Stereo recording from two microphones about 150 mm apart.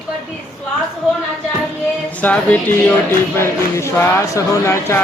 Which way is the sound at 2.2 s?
10° left (ahead or behind).